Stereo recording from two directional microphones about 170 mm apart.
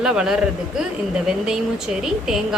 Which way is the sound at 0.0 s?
5° right (ahead or behind).